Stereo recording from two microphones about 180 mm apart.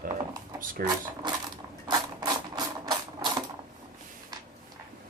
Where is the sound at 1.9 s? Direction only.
20° right (ahead or behind).